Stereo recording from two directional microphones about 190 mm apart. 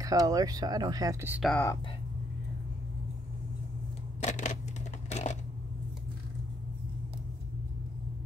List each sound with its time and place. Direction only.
0.0 s speech: 20° right (ahead or behind)
1.4 s speech: 5° left (ahead or behind)
4.2 s scissors: 40° left (ahead or behind)
5.1 s coin: 35° left (ahead or behind)